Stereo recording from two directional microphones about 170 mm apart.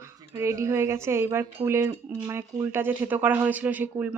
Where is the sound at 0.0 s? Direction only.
20° right (ahead or behind).